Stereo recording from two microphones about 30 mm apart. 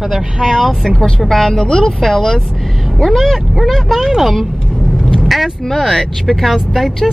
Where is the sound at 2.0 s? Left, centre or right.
Centre.